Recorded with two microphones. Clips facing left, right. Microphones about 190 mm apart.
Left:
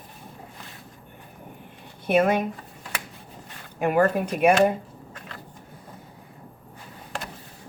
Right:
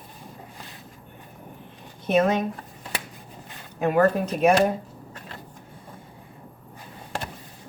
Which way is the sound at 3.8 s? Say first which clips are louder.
Right 1 dB; 10° left (ahead or behind).